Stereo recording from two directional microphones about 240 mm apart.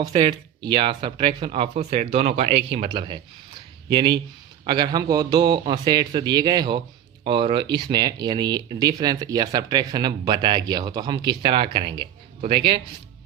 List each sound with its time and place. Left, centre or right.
0.0 s speech: right